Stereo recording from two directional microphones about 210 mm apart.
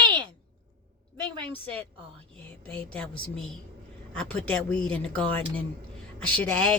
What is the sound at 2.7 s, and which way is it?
A woman's voice, 5° left (ahead or behind).